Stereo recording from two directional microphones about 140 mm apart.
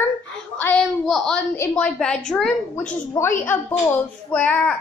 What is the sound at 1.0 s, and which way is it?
A woman's voice, 5° left (ahead or behind).